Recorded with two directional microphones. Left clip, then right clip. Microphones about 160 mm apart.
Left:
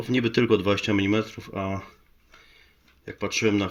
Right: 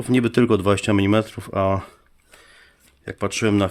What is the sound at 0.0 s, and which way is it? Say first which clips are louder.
Speech: right 4 dB; 20° right (ahead or behind).